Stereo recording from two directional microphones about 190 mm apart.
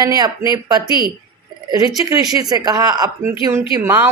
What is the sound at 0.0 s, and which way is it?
Speech, 20° right (ahead or behind).